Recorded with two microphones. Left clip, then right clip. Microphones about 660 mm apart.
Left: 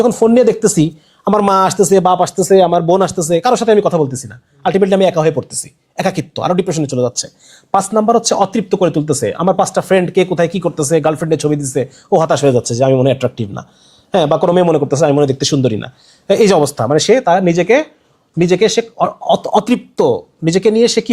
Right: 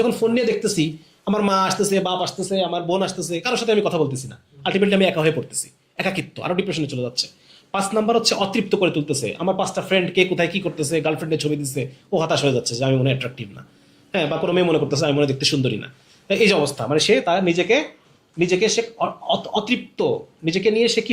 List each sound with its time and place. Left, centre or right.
0.0 s speech: left